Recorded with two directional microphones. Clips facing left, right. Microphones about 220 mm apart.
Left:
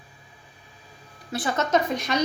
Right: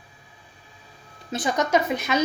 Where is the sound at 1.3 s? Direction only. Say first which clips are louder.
Right 1 dB; 20° right (ahead or behind).